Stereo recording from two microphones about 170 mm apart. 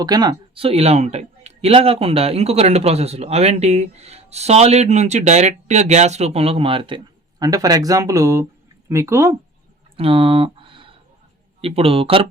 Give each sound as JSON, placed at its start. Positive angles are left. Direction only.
{"t": 0.0, "sound": "speech", "side_deg": -25}
{"t": 10.0, "sound": "a sound", "side_deg": -30}
{"t": 11.6, "sound": "speech", "side_deg": -35}